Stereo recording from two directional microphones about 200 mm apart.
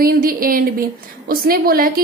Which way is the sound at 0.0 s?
45° right (ahead or behind).